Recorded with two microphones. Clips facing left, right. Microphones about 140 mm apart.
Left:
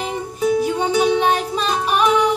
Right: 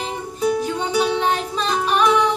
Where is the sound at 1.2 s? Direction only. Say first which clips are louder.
Left 3 dB; 15° left (ahead or behind).